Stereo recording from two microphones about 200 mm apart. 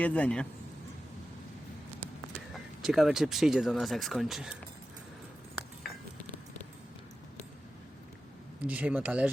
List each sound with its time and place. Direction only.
0.0 s a man's voice: 5° left (ahead or behind)
2.5 s speech: centre (ahead or behind)
8.6 s speech: 5° right (ahead or behind)